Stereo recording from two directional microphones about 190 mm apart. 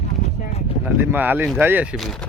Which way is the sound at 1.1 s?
10° right (ahead or behind).